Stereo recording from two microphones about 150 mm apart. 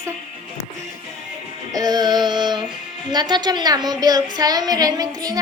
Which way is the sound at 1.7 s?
25° right (ahead or behind).